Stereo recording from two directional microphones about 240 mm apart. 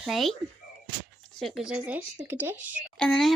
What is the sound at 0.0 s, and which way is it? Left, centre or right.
Speech, centre.